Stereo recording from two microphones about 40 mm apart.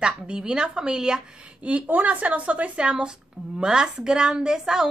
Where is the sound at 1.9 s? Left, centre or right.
Right; by 4.8 s centre.